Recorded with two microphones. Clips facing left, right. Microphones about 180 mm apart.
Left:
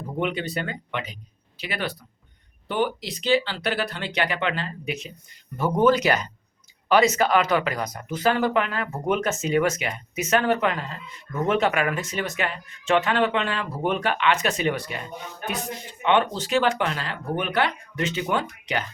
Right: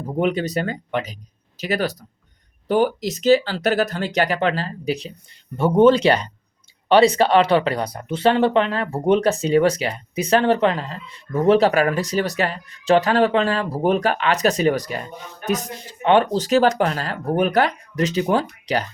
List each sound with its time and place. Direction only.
0.2 s speech: 40° right (ahead or behind)